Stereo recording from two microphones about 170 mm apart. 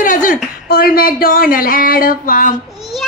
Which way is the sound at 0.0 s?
50° left (ahead or behind).